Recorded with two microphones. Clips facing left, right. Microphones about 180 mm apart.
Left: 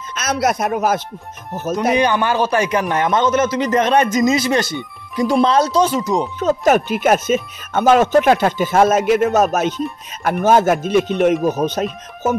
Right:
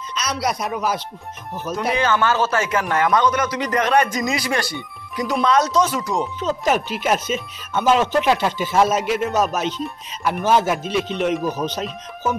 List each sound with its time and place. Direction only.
0.1 s speech: 50° left (ahead or behind)
1.8 s a man's voice: 20° left (ahead or behind)
6.4 s speech: 50° left (ahead or behind)